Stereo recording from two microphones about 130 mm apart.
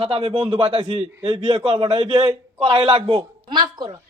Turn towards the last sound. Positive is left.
turn(degrees=-35)  # may be behind; listen again after turning